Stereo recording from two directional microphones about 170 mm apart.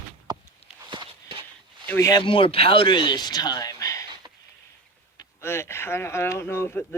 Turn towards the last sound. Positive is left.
turn(degrees=15)  # may be behind; listen again after turning